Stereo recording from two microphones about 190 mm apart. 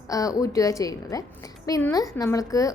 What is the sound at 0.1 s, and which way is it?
A woman's voice, 15° left (ahead or behind).